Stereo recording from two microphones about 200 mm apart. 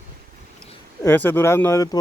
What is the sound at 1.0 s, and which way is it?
Speech, 10° left (ahead or behind).